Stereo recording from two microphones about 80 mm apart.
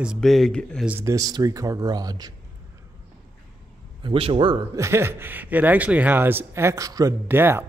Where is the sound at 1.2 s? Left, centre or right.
Right.